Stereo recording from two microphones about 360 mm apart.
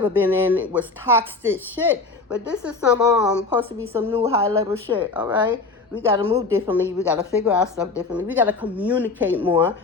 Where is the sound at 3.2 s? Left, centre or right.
Centre.